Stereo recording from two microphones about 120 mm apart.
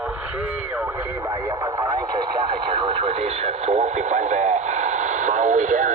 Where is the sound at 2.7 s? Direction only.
45° right (ahead or behind); by 5.9 s 90° right.